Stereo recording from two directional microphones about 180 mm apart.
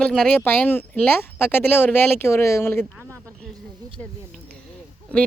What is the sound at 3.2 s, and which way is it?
Snake, 5° left (ahead or behind).